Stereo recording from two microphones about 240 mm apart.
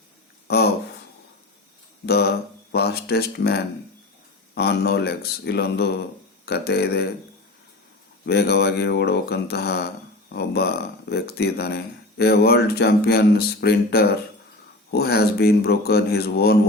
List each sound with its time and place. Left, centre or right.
0.4 s a sound: left
2.0 s speech: left
8.3 s speech: left